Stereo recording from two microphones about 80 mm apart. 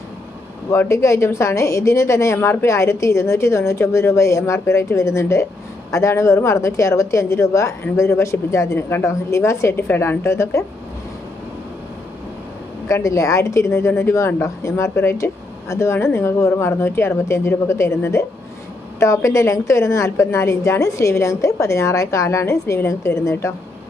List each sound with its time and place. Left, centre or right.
0.7 s a woman's voice: left
12.9 s a woman's voice: left